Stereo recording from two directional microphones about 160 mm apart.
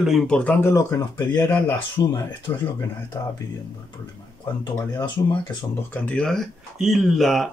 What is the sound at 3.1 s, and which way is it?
Speech, 20° left (ahead or behind).